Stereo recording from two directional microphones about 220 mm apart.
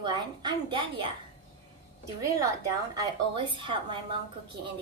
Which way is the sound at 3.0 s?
20° right (ahead or behind).